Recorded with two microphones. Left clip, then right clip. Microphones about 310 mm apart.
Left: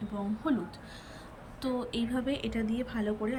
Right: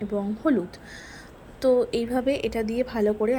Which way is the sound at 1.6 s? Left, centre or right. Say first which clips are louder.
Right 13 dB; centre.